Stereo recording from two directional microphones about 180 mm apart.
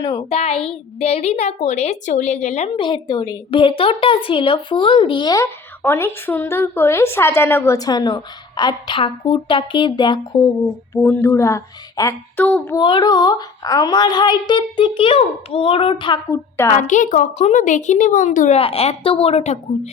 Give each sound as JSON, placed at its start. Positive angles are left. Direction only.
{"t": 0.0, "sound": "a woman's voice", "side_deg": 20}
{"t": 0.3, "sound": "a woman's voice", "side_deg": 35}
{"t": 2.7, "sound": "a woman's voice", "side_deg": 25}
{"t": 10.9, "sound": "a woman's voice", "side_deg": 15}
{"t": 12.5, "sound": "a woman's voice", "side_deg": 5}
{"t": 12.7, "sound": "a woman's voice", "side_deg": 25}
{"t": 16.8, "sound": "a woman's voice", "side_deg": 45}